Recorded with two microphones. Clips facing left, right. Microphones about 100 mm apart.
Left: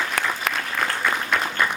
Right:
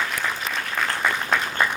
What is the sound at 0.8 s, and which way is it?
Applause, 55° left (ahead or behind).